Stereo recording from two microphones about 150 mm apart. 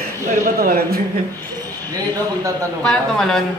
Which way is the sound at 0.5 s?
90° right.